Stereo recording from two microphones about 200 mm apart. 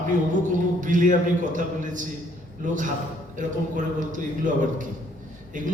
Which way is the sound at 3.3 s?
40° right (ahead or behind).